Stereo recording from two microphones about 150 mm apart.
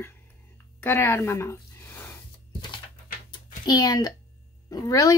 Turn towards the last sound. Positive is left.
turn(degrees=25)  # may be behind; listen again after turning